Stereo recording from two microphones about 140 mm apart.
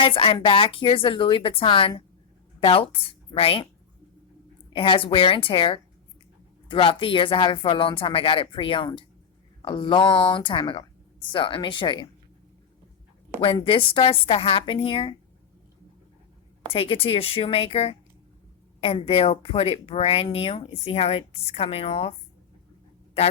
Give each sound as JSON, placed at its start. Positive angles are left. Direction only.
{"t": 0.0, "sound": "a woman's voice", "side_deg": 40}
{"t": 4.7, "sound": "speech", "side_deg": 40}
{"t": 13.4, "sound": "speech", "side_deg": 40}
{"t": 16.7, "sound": "speech", "side_deg": 40}